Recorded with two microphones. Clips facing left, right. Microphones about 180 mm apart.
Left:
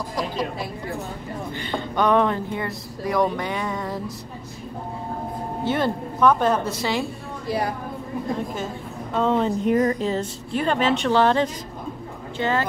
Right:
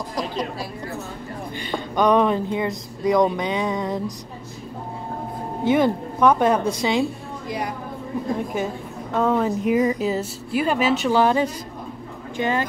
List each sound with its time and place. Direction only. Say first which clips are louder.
1.6 s speech: right 2 dB; 15° right (ahead or behind)
5.6 s speech: right 5 dB; 15° right (ahead or behind)
7.4 s a woman's voice: left 3 dB; 30° left (ahead or behind)
9.1 s speech: right 1 dB; 5° right (ahead or behind)